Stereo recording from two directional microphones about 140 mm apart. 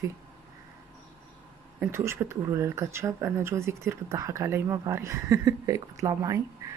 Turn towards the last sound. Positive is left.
turn(degrees=-20)  # may be behind; listen again after turning